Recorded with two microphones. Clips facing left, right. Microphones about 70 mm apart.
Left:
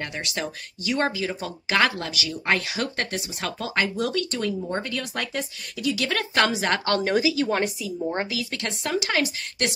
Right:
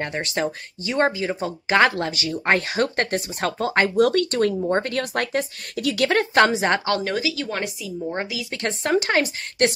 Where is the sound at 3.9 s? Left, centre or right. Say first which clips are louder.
Right 8 dB; right.